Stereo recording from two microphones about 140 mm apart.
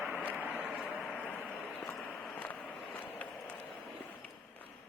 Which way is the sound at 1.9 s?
5° left (ahead or behind).